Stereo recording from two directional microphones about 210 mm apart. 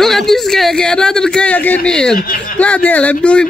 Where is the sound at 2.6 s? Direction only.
5° left (ahead or behind).